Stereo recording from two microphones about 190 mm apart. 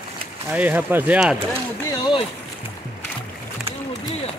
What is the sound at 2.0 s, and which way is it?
Speech, 25° left (ahead or behind).